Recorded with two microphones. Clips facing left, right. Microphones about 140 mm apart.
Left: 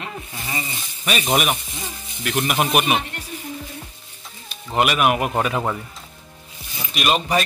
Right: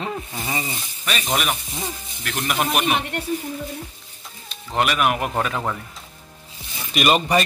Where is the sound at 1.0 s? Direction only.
10° left (ahead or behind).